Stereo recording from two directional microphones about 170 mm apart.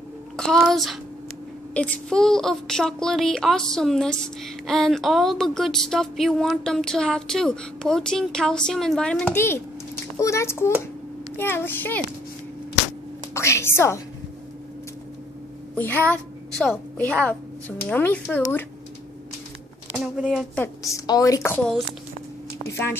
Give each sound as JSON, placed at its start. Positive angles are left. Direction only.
{"t": 0.4, "sound": "a woman's voice", "side_deg": 5}
{"t": 13.3, "sound": "a sound", "side_deg": 15}
{"t": 15.7, "sound": "a woman's voice", "side_deg": 10}
{"t": 19.9, "sound": "speech", "side_deg": -5}
{"t": 20.5, "sound": "a woman's voice", "side_deg": 15}
{"t": 22.7, "sound": "a woman's voice", "side_deg": 15}